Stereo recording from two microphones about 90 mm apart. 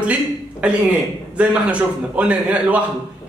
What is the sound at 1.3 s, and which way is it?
A man's voice, 15° right (ahead or behind).